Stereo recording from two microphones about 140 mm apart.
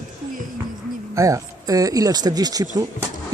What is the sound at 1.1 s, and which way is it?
Speech, 25° right (ahead or behind).